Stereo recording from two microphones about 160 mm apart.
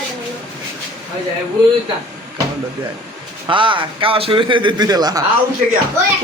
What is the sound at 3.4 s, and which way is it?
A man's voice, 30° right (ahead or behind).